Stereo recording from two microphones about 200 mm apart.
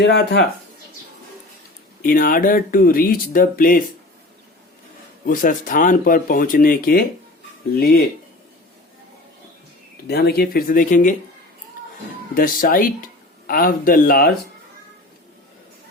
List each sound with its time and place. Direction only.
0.0 s speech: 55° left (ahead or behind)
2.0 s speech: 45° left (ahead or behind)
5.2 s speech: 45° left (ahead or behind)
10.1 s speech: 50° left (ahead or behind)
12.3 s speech: 45° left (ahead or behind)